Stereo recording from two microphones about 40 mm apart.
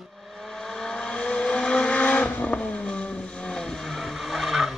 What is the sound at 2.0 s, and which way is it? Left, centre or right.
Vehicle, left.